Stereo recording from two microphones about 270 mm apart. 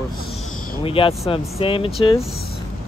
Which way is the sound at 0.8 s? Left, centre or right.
Centre.